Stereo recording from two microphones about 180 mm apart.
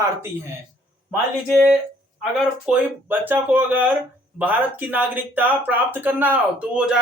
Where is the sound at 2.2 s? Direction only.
5° right (ahead or behind).